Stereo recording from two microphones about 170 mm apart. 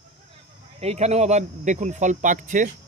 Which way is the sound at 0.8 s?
40° right (ahead or behind).